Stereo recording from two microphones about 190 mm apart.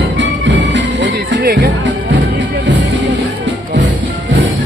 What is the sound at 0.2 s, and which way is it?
Music, 70° right (ahead or behind).